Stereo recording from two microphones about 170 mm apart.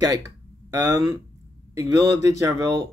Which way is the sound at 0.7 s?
20° right (ahead or behind).